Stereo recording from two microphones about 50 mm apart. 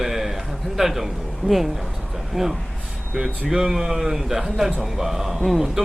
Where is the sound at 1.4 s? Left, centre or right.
Centre.